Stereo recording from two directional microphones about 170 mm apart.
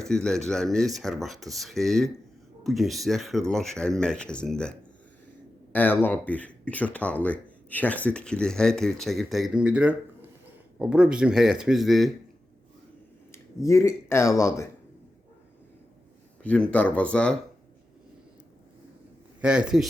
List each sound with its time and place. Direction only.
0.0 s speech: 5° left (ahead or behind)
5.7 s speech: 10° left (ahead or behind)
13.3 s speech: 15° left (ahead or behind)
16.4 s speech: 5° left (ahead or behind)
19.4 s speech: 5° right (ahead or behind)